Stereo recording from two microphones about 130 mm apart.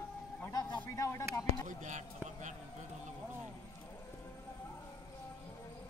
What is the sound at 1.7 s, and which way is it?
Speech, 70° right (ahead or behind).